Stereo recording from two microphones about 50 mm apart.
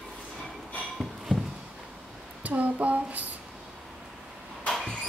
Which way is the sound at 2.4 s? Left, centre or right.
Right.